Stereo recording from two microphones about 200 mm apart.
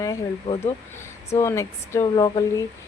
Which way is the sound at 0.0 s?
15° left (ahead or behind).